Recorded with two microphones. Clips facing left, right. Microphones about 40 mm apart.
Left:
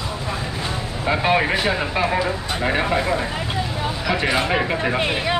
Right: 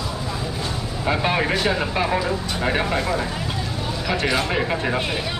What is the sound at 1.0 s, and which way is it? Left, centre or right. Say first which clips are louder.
Speech: left 3 dB; centre.